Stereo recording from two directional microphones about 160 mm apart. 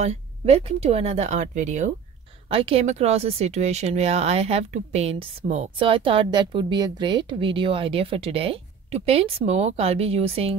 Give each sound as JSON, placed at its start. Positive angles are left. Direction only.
{"t": 0.0, "sound": "speech", "side_deg": -40}
{"t": 2.4, "sound": "speech", "side_deg": -40}
{"t": 5.8, "sound": "speech", "side_deg": -35}